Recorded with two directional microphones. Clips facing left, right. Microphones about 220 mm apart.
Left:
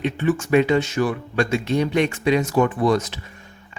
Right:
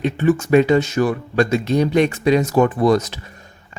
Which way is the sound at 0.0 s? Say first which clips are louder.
Right 4 dB; 40° right (ahead or behind).